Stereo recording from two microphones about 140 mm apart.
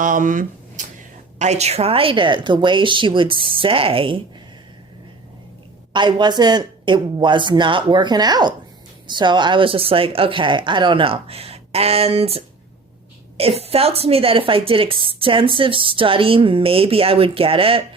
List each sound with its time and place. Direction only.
0.0 s speech: 70° right (ahead or behind)
1.4 s a woman's voice: 50° right (ahead or behind)
5.9 s a woman's voice: 35° right (ahead or behind)
13.6 s a woman's voice: 45° right (ahead or behind)